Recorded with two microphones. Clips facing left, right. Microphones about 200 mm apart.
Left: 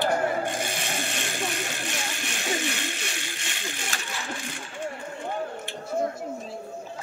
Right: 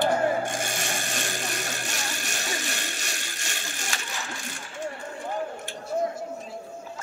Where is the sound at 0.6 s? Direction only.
45° right (ahead or behind).